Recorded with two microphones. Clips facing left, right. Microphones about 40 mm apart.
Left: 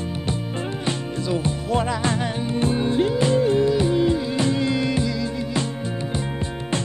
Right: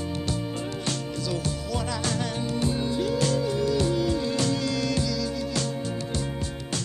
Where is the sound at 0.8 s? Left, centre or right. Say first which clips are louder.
Left 6 dB; left.